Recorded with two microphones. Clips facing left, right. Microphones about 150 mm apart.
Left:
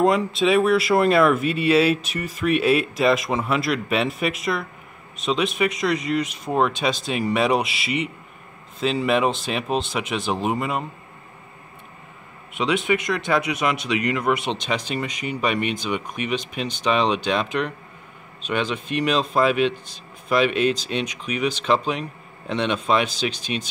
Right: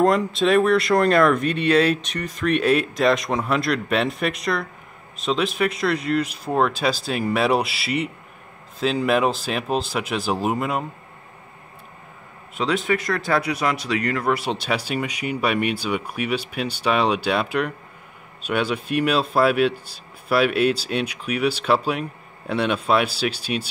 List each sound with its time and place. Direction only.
0.0 s speech: centre (ahead or behind)
12.6 s speech: 20° left (ahead or behind)
14.4 s speech: 5° right (ahead or behind)